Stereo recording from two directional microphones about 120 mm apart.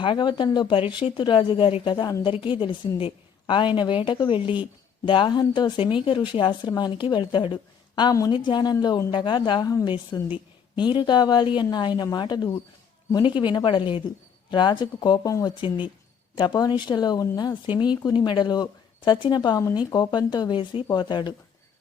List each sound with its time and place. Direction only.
0.0 s a woman's voice: 40° left (ahead or behind)
10.8 s a woman's voice: 40° left (ahead or behind)